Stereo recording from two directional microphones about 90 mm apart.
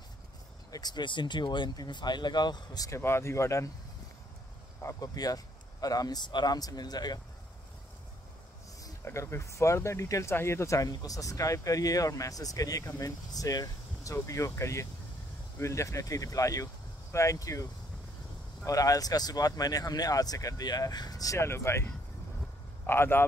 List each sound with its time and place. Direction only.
0.7 s speech: 45° left (ahead or behind)
2.9 s speech: 30° left (ahead or behind)
4.8 s speech: 45° left (ahead or behind)
9.0 s speech: 30° left (ahead or behind)
22.8 s a man's voice: 25° left (ahead or behind)